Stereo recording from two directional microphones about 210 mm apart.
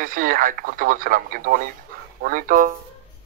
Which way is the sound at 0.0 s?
40° right (ahead or behind).